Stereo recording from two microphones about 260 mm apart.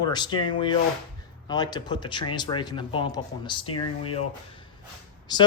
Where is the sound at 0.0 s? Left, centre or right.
Centre.